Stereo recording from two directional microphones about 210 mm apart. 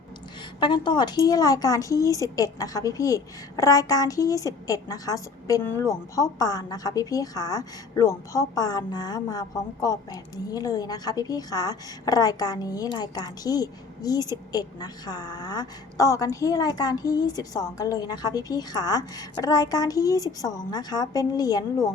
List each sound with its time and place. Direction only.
0.6 s speech: 20° left (ahead or behind)